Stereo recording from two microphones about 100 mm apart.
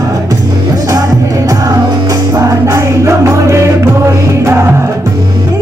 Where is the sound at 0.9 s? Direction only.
40° right (ahead or behind).